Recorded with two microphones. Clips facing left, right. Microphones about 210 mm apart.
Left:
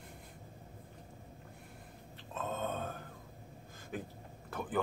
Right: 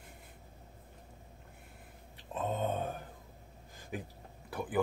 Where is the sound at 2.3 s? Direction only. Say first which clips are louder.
Right 4 dB; 15° right (ahead or behind).